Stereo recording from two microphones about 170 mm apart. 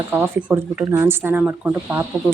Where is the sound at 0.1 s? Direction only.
10° right (ahead or behind).